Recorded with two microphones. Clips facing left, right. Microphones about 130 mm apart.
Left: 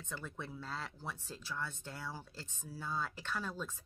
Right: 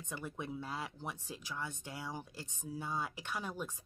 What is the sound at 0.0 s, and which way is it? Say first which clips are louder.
Speech: right 2 dB; 15° right (ahead or behind).